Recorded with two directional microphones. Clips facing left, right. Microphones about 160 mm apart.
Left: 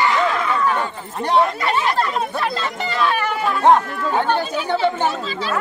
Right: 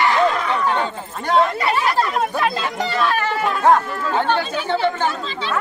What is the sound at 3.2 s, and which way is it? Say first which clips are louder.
Chatter: left 1 dB; 10° left (ahead or behind).